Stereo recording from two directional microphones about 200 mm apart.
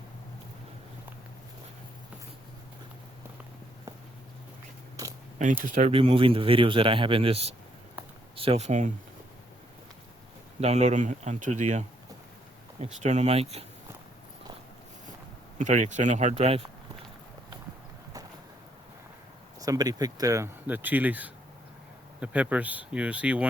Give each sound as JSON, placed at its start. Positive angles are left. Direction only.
{"t": 5.0, "sound": "biting", "side_deg": -15}
{"t": 5.6, "sound": "speech", "side_deg": -40}
{"t": 5.9, "sound": "speech", "side_deg": -25}
{"t": 10.6, "sound": "speech", "side_deg": -35}
{"t": 13.0, "sound": "speech", "side_deg": -35}
{"t": 15.5, "sound": "speech", "side_deg": -40}
{"t": 19.5, "sound": "speech", "side_deg": -20}